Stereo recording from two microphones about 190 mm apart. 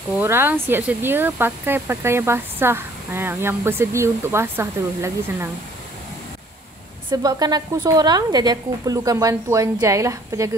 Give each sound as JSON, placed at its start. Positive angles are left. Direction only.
{"t": 0.2, "sound": "speech", "side_deg": -10}
{"t": 7.1, "sound": "speech", "side_deg": -20}